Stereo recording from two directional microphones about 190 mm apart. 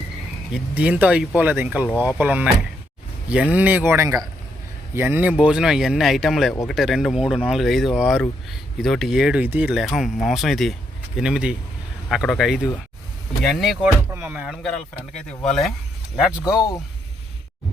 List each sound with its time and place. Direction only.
0.5 s speech: 5° right (ahead or behind)
14.1 s speech: 10° right (ahead or behind)
15.1 s speech: 5° left (ahead or behind)
16.4 s speech: 20° left (ahead or behind)